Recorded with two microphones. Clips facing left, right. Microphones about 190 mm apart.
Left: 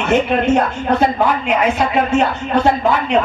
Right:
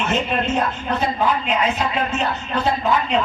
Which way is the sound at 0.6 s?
70° left (ahead or behind).